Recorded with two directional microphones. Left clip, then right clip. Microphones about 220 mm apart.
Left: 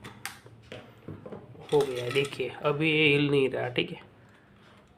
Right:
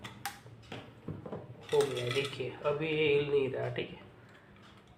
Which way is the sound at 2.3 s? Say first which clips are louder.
Left 5 dB; 55° left (ahead or behind).